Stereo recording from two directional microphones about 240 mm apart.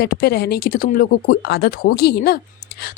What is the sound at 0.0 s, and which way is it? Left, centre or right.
A woman's voice, left.